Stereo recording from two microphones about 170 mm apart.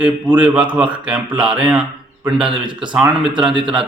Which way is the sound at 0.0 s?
5° right (ahead or behind).